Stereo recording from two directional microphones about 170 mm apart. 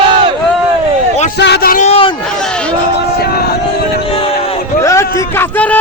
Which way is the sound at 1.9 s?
35° left (ahead or behind).